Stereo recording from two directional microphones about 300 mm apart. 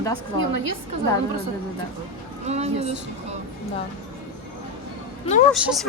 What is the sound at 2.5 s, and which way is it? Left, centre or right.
Speech, right.